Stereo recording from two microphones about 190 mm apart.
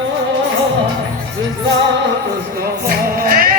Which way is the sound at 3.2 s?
50° right (ahead or behind).